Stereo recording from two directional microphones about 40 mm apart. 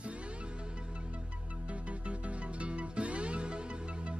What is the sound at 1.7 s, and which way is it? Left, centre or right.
Music, right.